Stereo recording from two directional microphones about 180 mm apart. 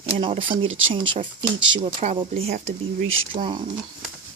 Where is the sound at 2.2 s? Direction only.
30° right (ahead or behind).